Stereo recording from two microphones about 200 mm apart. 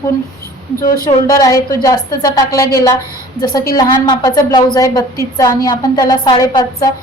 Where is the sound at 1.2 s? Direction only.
20° left (ahead or behind).